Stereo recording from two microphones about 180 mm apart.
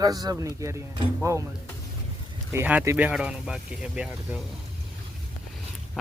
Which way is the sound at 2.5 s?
10° right (ahead or behind).